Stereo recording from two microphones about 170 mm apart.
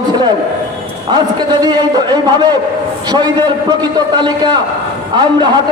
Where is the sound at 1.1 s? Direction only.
25° right (ahead or behind).